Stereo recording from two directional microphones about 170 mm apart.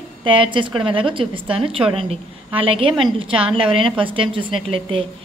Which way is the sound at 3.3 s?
5° right (ahead or behind).